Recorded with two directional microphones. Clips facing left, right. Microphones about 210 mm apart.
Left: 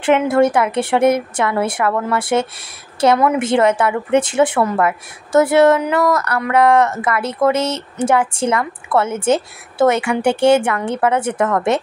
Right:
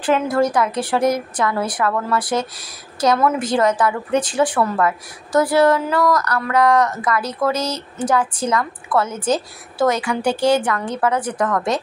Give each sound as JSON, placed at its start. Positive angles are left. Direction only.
{"t": 0.3, "sound": "a woman's voice", "side_deg": 25}